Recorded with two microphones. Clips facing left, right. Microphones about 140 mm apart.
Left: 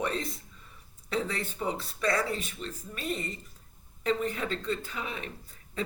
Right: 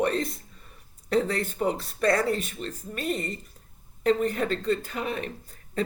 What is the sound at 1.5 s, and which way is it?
Speech, 50° right (ahead or behind).